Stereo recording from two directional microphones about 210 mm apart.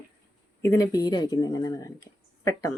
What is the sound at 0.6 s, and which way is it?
Speech, 15° left (ahead or behind).